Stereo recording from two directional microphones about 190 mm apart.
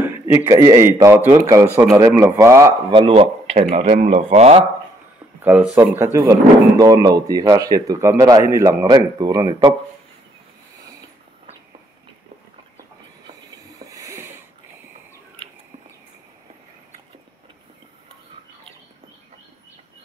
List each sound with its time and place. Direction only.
0.0 s a man's voice: 10° right (ahead or behind)
2.9 s speech: 25° right (ahead or behind)
5.4 s speech: 10° right (ahead or behind)
13.7 s a sound: 20° right (ahead or behind)